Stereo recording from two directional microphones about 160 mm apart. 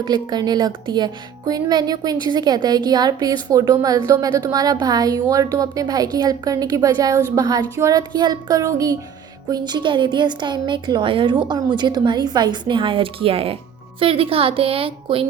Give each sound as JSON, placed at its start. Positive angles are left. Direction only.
{"t": 0.0, "sound": "a woman's voice", "side_deg": -25}